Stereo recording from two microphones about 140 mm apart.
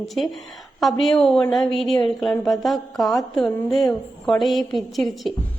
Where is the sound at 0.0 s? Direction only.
Centre (ahead or behind).